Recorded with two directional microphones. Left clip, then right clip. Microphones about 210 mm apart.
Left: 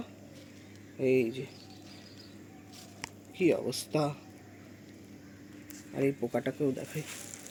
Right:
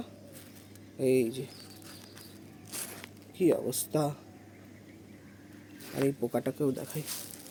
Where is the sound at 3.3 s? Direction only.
15° right (ahead or behind).